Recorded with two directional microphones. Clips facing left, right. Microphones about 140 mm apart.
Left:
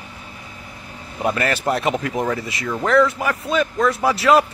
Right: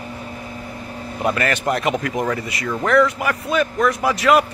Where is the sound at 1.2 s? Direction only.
5° left (ahead or behind).